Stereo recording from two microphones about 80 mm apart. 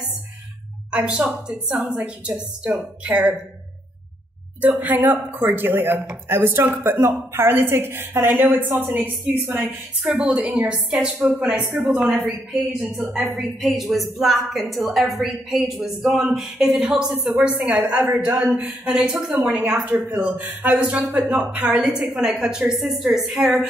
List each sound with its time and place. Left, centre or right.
0.9 s a woman's voice: centre
4.6 s a woman's voice: right
17.3 s a woman's voice: centre